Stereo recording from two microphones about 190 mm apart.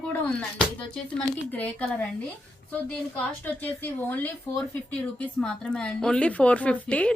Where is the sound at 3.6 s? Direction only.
10° left (ahead or behind).